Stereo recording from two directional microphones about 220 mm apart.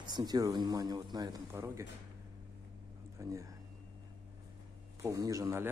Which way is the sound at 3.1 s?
15° right (ahead or behind).